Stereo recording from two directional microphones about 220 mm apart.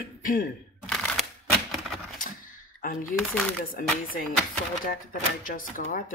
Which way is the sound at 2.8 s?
40° left (ahead or behind).